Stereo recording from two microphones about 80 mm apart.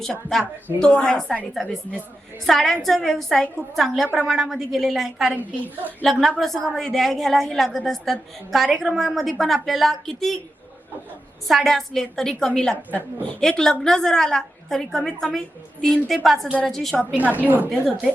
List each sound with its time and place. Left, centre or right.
0.0 s a woman's voice: centre
2.5 s a woman's voice: centre
5.4 s a woman's voice: right
6.1 s a woman's voice: centre
11.4 s a woman's voice: centre
12.9 s a woman's voice: right
13.4 s a woman's voice: centre
17.2 s a woman's voice: centre
17.7 s a woman's voice: centre